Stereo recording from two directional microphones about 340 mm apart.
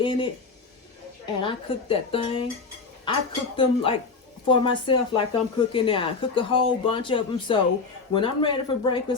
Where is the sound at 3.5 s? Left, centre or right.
Centre.